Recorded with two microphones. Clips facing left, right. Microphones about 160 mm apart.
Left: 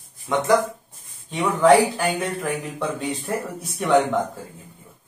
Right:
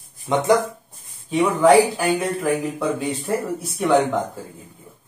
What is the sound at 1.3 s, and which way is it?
Speech, 5° right (ahead or behind).